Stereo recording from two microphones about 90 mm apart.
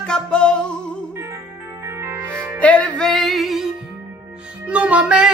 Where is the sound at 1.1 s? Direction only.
30° right (ahead or behind).